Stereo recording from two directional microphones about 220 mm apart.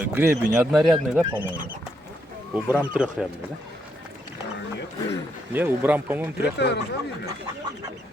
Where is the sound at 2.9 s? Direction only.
5° right (ahead or behind).